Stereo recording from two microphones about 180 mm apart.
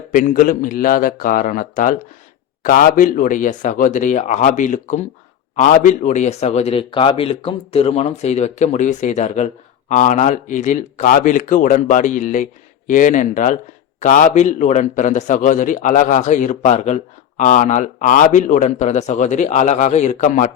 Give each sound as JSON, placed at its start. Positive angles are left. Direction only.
{"t": 0.1, "sound": "a man's voice", "side_deg": 50}